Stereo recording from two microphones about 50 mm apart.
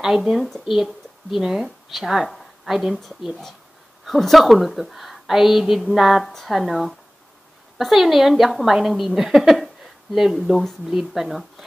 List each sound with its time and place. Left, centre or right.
0.0 s a woman's voice: centre
4.2 s a woman's voice: centre